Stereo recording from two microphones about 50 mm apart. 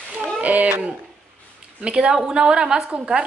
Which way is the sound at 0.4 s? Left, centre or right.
Right.